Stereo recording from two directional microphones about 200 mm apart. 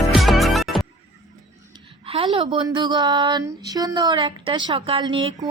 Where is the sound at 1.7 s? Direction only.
30° right (ahead or behind).